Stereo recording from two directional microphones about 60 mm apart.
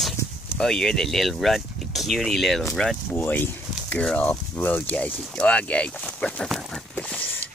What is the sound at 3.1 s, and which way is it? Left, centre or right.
Speech, left.